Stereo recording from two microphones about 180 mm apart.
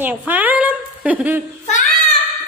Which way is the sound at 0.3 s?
10° right (ahead or behind).